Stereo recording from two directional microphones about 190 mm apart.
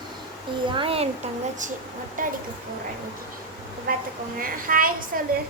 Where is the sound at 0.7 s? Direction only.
30° right (ahead or behind).